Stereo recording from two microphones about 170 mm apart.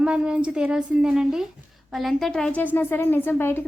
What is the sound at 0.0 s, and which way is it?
A woman's voice, 5° right (ahead or behind).